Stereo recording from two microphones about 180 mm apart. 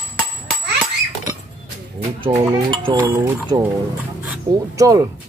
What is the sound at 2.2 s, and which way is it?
Speech, 25° right (ahead or behind).